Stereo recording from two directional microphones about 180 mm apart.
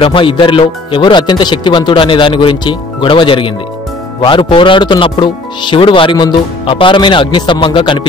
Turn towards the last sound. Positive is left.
turn(degrees=30)  # may be behind; listen again after turning